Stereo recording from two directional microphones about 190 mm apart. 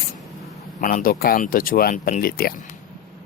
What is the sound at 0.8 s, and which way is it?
Speech, 45° left (ahead or behind).